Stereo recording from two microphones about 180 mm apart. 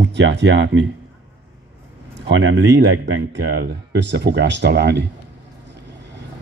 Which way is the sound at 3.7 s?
75° right (ahead or behind).